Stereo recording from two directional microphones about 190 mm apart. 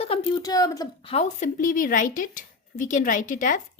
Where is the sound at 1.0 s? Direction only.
35° left (ahead or behind).